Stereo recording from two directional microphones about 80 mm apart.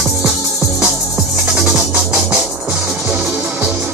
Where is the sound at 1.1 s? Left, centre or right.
Right.